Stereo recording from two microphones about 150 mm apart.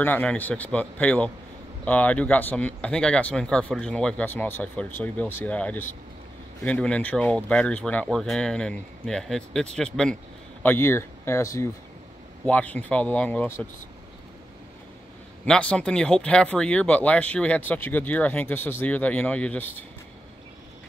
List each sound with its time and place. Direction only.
0.0 s speech: 10° left (ahead or behind)
15.4 s speech: 5° left (ahead or behind)